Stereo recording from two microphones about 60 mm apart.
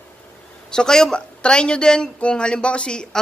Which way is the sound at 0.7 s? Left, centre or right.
Centre.